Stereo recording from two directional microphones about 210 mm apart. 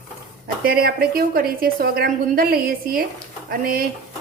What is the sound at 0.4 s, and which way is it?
A woman's voice, 45° right (ahead or behind).